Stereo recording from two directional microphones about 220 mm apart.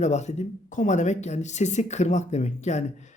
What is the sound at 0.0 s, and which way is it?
Speech, 30° left (ahead or behind).